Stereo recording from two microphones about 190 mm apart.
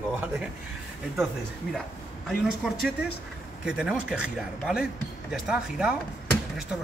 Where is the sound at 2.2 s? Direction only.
Centre (ahead or behind).